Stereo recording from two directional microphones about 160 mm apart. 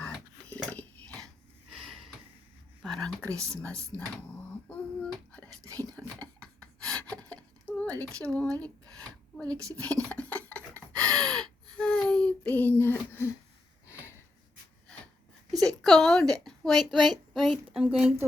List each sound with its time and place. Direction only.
0.0 s a sound: 10° left (ahead or behind)
1.7 s a sound: centre (ahead or behind)
2.8 s speech: 5° left (ahead or behind)
3.2 s a woman's voice: 20° right (ahead or behind)
3.4 s speech: 5° left (ahead or behind)
4.7 s a sound: 10° left (ahead or behind)
5.6 s speech: 20° right (ahead or behind)
6.0 s rub: 5° left (ahead or behind)
9.5 s a woman's voice: 20° right (ahead or behind)
9.7 s rub: 10° left (ahead or behind)
15.6 s a sound: centre (ahead or behind)
16.3 s a woman's voice: centre (ahead or behind)